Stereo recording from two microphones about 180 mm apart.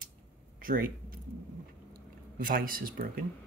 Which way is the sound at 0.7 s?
50° right (ahead or behind).